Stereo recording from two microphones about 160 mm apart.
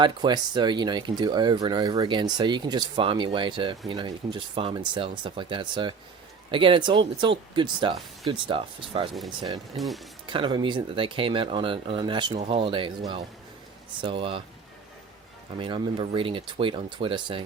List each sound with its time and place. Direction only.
0.0 s speech: 30° right (ahead or behind)
9.7 s speech: centre (ahead or behind)
10.2 s speech: 30° right (ahead or behind)
15.5 s speech: 30° right (ahead or behind)